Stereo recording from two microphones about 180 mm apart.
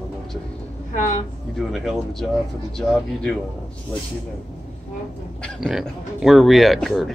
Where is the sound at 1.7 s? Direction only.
Centre (ahead or behind).